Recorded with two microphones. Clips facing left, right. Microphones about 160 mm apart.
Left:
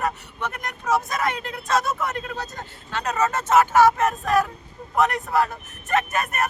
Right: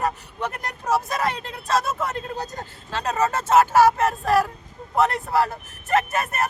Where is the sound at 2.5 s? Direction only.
35° right (ahead or behind).